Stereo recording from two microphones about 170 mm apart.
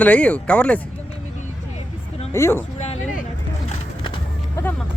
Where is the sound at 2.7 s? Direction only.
40° left (ahead or behind).